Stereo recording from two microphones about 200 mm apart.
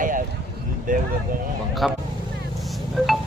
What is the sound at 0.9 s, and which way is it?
Speech, 40° right (ahead or behind).